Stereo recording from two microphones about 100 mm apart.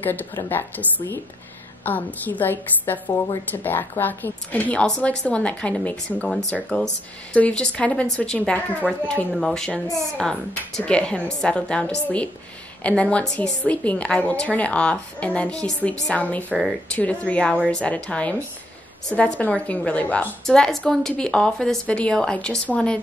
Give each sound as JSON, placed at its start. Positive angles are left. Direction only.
{"t": 0.0, "sound": "a woman's voice", "side_deg": 15}
{"t": 8.8, "sound": "speech", "side_deg": -5}
{"t": 9.4, "sound": "a woman's voice", "side_deg": 5}
{"t": 10.8, "sound": "a woman's voice", "side_deg": 10}